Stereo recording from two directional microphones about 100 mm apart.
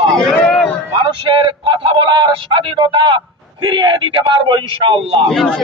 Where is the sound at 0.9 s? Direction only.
55° right (ahead or behind).